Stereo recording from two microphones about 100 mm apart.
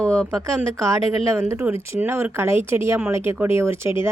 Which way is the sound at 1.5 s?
25° right (ahead or behind).